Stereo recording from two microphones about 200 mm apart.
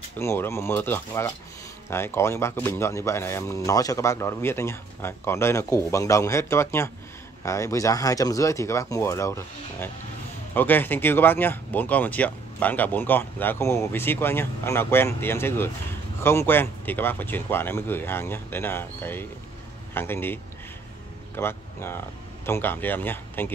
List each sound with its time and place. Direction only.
0.2 s speech: 15° left (ahead or behind)
21.4 s speech: 10° left (ahead or behind)